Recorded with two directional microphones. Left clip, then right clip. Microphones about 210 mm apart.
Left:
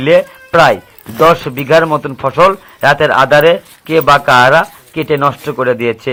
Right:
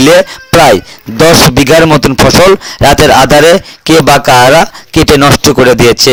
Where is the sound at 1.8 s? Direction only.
50° right (ahead or behind).